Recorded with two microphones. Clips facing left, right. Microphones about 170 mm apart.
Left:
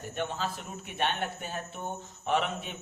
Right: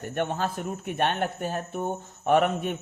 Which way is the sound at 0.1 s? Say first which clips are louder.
Right 6 dB; 55° right (ahead or behind).